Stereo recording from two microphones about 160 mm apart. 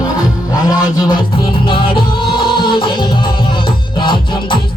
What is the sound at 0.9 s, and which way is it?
Music, 25° left (ahead or behind).